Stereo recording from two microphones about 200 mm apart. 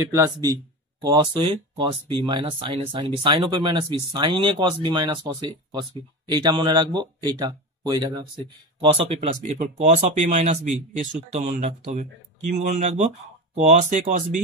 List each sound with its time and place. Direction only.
0.0 s speech: 15° right (ahead or behind); by 14.4 s 40° right (ahead or behind)